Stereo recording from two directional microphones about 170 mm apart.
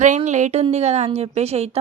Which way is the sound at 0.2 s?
45° right (ahead or behind).